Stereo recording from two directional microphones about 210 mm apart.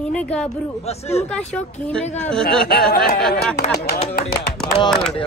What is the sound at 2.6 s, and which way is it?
Speech, 45° left (ahead or behind).